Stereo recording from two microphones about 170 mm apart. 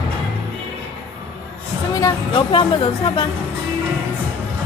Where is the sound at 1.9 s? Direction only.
25° left (ahead or behind).